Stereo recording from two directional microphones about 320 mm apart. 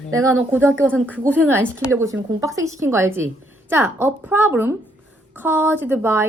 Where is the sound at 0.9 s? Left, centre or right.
Centre.